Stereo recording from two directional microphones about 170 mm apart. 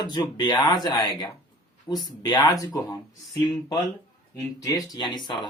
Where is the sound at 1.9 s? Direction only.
10° left (ahead or behind).